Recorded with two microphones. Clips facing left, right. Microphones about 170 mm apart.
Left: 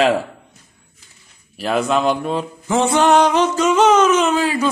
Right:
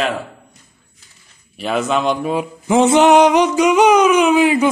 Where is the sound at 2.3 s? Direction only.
15° right (ahead or behind).